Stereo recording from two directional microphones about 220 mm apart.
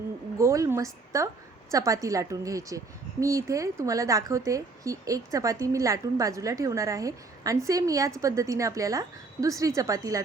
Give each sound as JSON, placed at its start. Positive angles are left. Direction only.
{"t": 0.3, "sound": "a woman's voice", "side_deg": -15}